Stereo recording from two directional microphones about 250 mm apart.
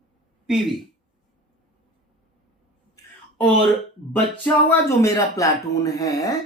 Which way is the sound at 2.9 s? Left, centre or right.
Centre.